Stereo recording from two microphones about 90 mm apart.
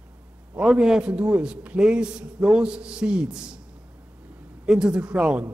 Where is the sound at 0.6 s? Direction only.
5° right (ahead or behind).